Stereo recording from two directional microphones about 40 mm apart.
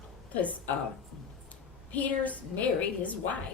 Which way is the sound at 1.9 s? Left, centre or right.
Left.